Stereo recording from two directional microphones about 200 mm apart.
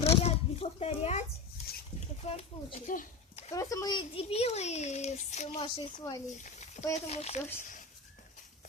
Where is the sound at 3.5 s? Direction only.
15° left (ahead or behind); by 5.8 s 30° left (ahead or behind).